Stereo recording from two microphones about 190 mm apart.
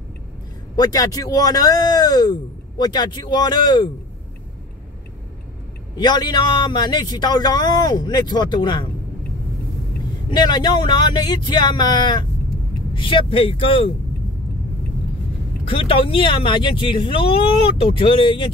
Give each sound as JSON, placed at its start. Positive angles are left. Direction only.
{"t": 0.7, "sound": "speech", "side_deg": 20}
{"t": 5.9, "sound": "speech", "side_deg": 20}
{"t": 10.3, "sound": "speech", "side_deg": 25}
{"t": 15.7, "sound": "speech", "side_deg": 30}